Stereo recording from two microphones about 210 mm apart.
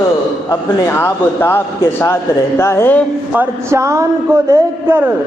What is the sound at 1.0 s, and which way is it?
Speech, 10° left (ahead or behind).